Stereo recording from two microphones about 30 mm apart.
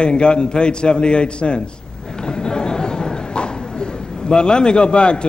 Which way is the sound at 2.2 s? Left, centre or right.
Left.